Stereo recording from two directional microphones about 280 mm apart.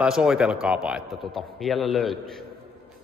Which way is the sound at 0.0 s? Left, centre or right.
Centre.